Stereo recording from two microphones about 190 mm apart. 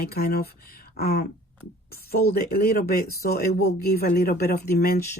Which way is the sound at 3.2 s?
55° left (ahead or behind).